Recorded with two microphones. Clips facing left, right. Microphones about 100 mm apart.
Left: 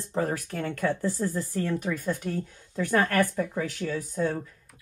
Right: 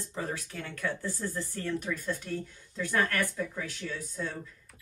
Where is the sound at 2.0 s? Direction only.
50° left (ahead or behind).